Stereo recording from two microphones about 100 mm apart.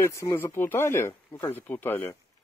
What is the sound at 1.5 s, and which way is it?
Speech, 20° left (ahead or behind).